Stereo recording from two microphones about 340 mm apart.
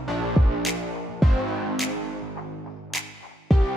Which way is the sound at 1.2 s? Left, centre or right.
Centre.